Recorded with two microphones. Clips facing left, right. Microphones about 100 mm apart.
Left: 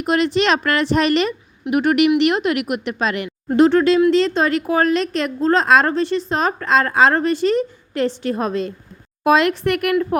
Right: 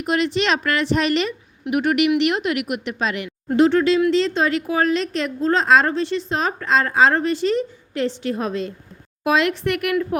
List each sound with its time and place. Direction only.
0.0 s a woman's voice: 40° left (ahead or behind)